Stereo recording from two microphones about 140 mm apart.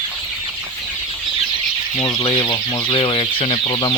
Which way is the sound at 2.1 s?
40° left (ahead or behind).